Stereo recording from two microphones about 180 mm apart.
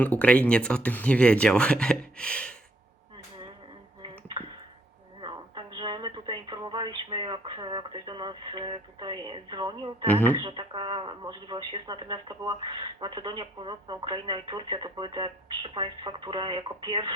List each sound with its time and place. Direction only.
0.0 s speech: 10° left (ahead or behind)
5.2 s speech: 25° right (ahead or behind)
10.1 s speech: 10° left (ahead or behind)
10.3 s speech: 25° right (ahead or behind)